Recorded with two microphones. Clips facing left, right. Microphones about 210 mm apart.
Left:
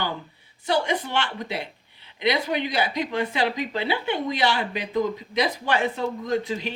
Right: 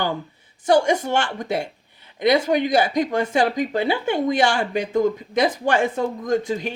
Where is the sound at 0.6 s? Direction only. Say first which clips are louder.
Right 7 dB; 45° right (ahead or behind).